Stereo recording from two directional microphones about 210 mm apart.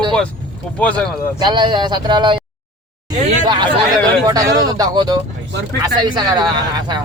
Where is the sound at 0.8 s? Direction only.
5° left (ahead or behind).